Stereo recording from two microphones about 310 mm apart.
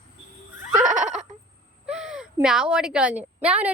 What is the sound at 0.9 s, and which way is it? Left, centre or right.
Neigh, right.